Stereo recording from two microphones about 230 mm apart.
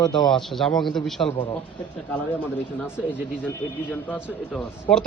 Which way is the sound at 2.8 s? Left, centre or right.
Centre.